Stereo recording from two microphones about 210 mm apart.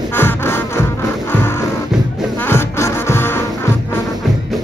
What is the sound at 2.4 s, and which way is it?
Music, 10° left (ahead or behind).